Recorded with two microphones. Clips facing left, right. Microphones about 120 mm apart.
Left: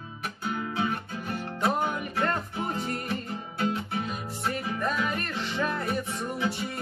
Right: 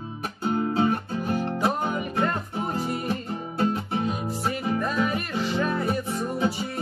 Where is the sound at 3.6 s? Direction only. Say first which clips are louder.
Right 4 dB; 30° right (ahead or behind).